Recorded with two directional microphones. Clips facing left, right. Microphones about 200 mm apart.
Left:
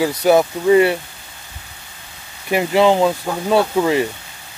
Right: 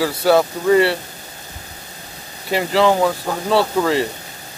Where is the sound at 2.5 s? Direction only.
20° left (ahead or behind).